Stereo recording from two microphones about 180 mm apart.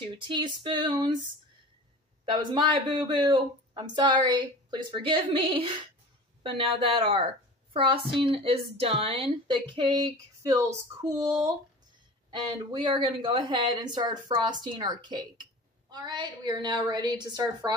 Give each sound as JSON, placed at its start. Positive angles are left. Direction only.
{"t": 0.2, "sound": "a woman's voice", "side_deg": -25}
{"t": 2.5, "sound": "a woman's voice", "side_deg": -25}
{"t": 12.3, "sound": "a woman's voice", "side_deg": -25}